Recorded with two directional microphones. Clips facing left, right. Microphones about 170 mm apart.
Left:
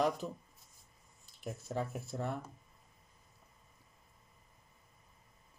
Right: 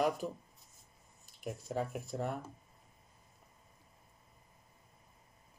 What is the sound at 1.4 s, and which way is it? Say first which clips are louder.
Speech: right 1 dB; 10° right (ahead or behind).